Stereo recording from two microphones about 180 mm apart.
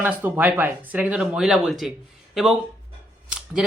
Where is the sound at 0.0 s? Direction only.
10° right (ahead or behind).